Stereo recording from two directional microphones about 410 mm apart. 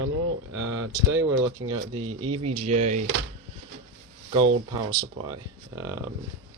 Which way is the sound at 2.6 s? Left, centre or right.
Centre.